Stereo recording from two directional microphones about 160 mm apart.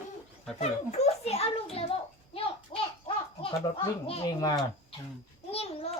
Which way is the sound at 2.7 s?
35° left (ahead or behind).